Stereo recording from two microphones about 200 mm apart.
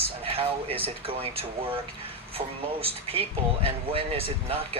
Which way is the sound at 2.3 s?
30° right (ahead or behind).